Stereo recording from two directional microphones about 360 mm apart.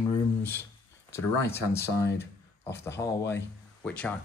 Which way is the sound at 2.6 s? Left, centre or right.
Centre.